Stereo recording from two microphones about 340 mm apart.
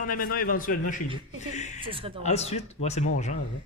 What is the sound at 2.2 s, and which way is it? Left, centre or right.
Speech, centre.